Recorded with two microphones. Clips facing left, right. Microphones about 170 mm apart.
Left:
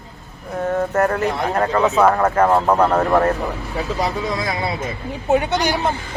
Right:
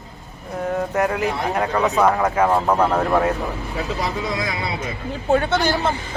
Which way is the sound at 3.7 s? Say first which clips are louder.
Left 3 dB; 40° left (ahead or behind).